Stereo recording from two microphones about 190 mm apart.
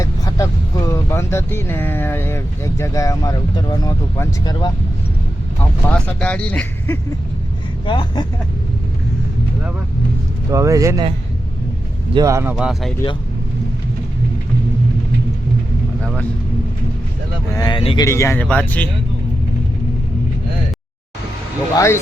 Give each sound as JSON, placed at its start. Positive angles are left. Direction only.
{"t": 0.0, "sound": "vehicle", "side_deg": 15}
{"t": 0.9, "sound": "speech", "side_deg": 15}
{"t": 5.9, "sound": "speech", "side_deg": 5}
{"t": 7.9, "sound": "speech", "side_deg": 25}
{"t": 10.5, "sound": "speech", "side_deg": -15}
{"t": 12.1, "sound": "speech", "side_deg": -15}
{"t": 17.5, "sound": "speech", "side_deg": 20}
{"t": 18.0, "sound": "speech", "side_deg": 15}
{"t": 21.8, "sound": "speech", "side_deg": 15}